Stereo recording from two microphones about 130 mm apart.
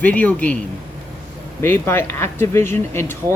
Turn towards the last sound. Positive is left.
turn(degrees=20)  # may be behind; listen again after turning